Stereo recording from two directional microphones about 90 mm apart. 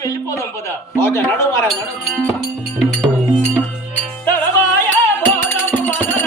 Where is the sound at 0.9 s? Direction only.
25° left (ahead or behind).